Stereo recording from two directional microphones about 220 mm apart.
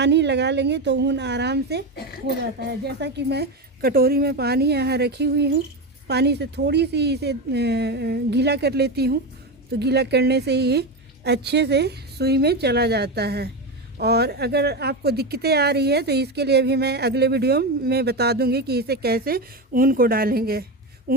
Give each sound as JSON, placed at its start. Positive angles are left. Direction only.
{"t": 0.0, "sound": "speech", "side_deg": -50}